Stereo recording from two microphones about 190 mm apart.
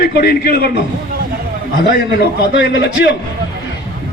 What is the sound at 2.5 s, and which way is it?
Speech, 65° left (ahead or behind).